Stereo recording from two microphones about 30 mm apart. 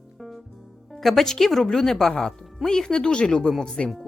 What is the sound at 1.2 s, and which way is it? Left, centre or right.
Speech, centre.